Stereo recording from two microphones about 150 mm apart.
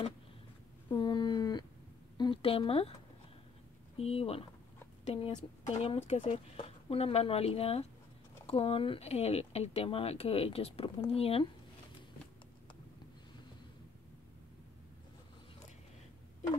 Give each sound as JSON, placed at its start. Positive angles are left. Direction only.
{"t": 0.9, "sound": "a sound", "side_deg": 30}
{"t": 2.1, "sound": "a woman's voice", "side_deg": 35}
{"t": 3.9, "sound": "speech", "side_deg": 40}